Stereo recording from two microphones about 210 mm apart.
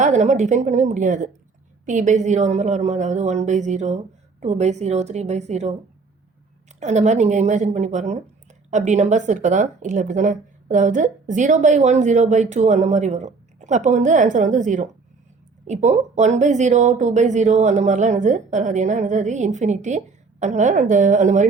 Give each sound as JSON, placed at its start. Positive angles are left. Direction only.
{"t": 0.0, "sound": "a woman's voice", "side_deg": -35}
{"t": 6.7, "sound": "a woman's voice", "side_deg": -35}